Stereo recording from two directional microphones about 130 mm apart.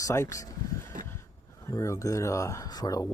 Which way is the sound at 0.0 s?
25° left (ahead or behind).